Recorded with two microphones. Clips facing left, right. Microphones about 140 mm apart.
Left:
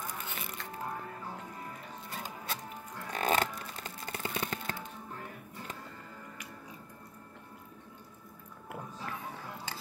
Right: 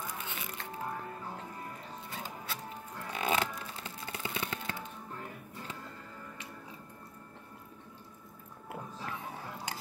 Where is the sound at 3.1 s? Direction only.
45° left (ahead or behind).